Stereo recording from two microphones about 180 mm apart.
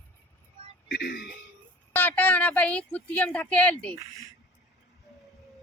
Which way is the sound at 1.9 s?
10° left (ahead or behind).